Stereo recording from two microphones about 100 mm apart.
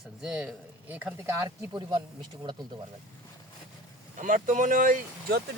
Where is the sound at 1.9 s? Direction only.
45° right (ahead or behind).